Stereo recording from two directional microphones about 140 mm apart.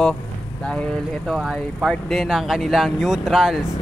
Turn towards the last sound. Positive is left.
turn(degrees=-5)  # may be behind; listen again after turning